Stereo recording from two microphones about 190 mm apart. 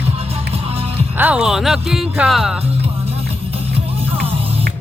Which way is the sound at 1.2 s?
5° right (ahead or behind).